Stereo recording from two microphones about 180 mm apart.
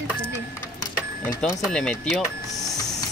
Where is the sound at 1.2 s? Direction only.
5° left (ahead or behind).